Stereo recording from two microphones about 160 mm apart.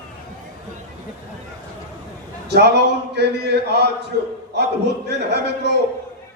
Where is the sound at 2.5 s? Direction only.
90° right.